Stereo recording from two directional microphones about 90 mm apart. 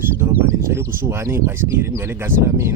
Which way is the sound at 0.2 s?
25° right (ahead or behind).